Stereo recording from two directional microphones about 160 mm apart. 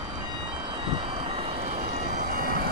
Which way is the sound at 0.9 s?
30° right (ahead or behind).